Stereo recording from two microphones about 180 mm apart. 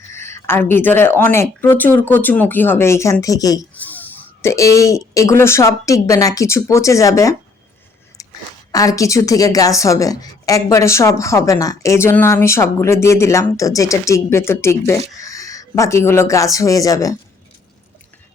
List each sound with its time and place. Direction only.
0.1 s a woman's voice: 15° left (ahead or behind)
3.8 s speech: 10° left (ahead or behind)
8.2 s a sound: 20° left (ahead or behind)
8.7 s a woman's voice: 20° left (ahead or behind)